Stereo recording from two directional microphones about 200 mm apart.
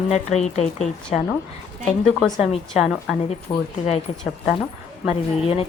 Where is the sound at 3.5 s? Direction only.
15° left (ahead or behind).